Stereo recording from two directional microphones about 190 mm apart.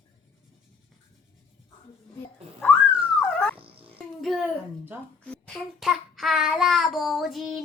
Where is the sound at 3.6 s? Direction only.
30° right (ahead or behind).